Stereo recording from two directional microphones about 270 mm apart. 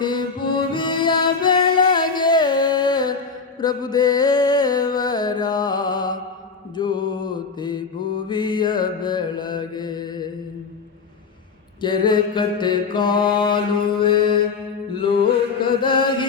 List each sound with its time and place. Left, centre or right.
0.0 s music: centre
6.7 s mantra: centre
11.8 s mantra: centre